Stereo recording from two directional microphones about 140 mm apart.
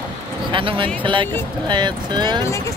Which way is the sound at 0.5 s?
35° right (ahead or behind).